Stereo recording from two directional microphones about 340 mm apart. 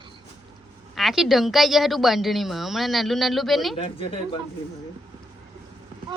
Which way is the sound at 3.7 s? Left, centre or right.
Centre.